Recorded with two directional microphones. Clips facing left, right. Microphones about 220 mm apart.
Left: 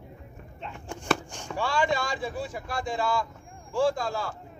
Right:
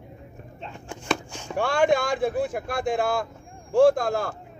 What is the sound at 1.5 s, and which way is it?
Speech, 55° right (ahead or behind).